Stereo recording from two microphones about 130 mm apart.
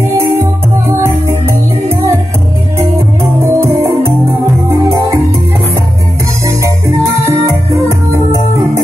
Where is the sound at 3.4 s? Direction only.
20° right (ahead or behind).